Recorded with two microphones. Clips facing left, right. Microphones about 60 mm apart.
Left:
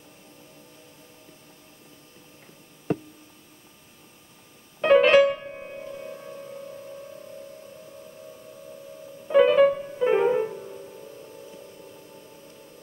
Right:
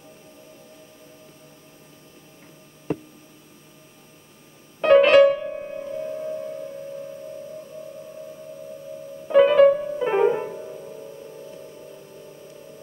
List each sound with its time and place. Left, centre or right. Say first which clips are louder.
4.8 s music: right 3 dB; centre
9.3 s music: right 3 dB; centre